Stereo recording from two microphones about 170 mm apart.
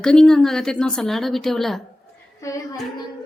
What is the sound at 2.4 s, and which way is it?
Speech, 20° left (ahead or behind).